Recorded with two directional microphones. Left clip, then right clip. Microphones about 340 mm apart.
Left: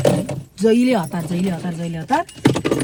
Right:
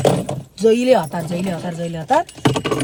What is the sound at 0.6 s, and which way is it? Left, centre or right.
Speech, centre.